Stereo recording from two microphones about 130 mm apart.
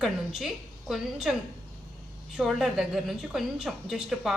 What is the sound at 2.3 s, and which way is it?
A woman's voice, 5° right (ahead or behind).